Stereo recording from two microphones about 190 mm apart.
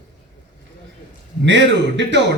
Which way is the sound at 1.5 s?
70° right (ahead or behind).